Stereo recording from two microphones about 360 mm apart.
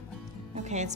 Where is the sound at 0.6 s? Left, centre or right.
Centre.